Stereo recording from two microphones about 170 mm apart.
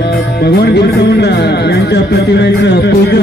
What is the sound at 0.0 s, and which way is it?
Music, 70° left (ahead or behind).